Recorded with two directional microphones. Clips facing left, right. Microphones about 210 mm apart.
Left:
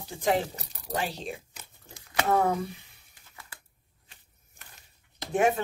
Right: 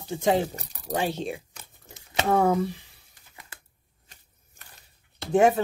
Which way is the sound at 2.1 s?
25° right (ahead or behind).